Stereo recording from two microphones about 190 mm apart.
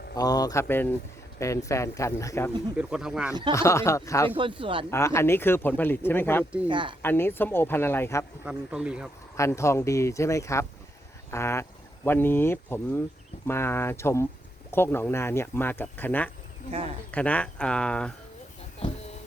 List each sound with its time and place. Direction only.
0.2 s speech: 20° left (ahead or behind)
2.7 s speech: 5° right (ahead or behind)
3.5 s speech: 15° left (ahead or behind)
4.4 s speech: 25° right (ahead or behind)
4.9 s speech: 15° left (ahead or behind)
6.7 s speech: 25° right (ahead or behind)
7.0 s speech: 10° left (ahead or behind)
8.4 s speech: 5° right (ahead or behind)
9.4 s speech: 15° left (ahead or behind)
18.8 s a sound: 35° left (ahead or behind)